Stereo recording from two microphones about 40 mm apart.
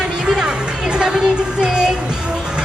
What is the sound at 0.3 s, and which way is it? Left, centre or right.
Music, right.